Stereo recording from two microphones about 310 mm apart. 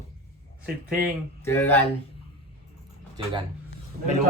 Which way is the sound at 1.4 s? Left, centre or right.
Centre.